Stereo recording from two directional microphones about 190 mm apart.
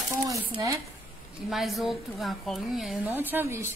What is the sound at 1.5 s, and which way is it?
A woman's voice, centre (ahead or behind).